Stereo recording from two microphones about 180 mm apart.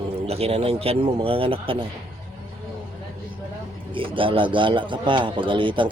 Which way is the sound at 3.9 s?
30° right (ahead or behind).